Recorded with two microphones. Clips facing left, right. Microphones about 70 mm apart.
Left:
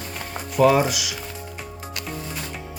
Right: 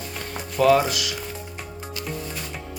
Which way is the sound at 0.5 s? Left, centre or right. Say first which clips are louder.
Left 1 dB; centre.